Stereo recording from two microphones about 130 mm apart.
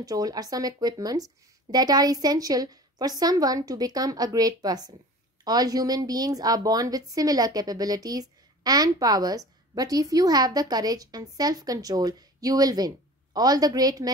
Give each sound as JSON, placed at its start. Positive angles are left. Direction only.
{"t": 0.0, "sound": "a woman's voice", "side_deg": -30}